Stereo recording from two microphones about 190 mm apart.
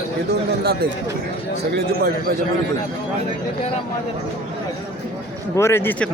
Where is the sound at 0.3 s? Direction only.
55° right (ahead or behind).